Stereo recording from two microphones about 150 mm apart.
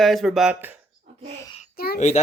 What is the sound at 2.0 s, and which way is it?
Speech, 50° left (ahead or behind).